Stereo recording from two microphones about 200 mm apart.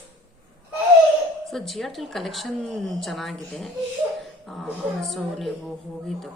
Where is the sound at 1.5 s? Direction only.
Centre (ahead or behind).